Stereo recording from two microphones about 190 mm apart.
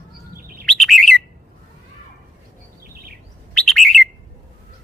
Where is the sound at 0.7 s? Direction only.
Centre (ahead or behind).